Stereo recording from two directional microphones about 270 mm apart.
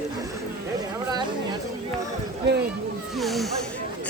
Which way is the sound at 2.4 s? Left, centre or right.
Right.